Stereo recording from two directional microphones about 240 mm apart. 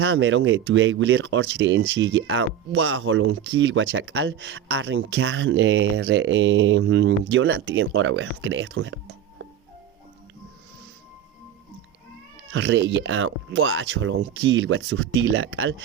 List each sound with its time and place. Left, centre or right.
0.0 s speech: right
12.5 s speech: right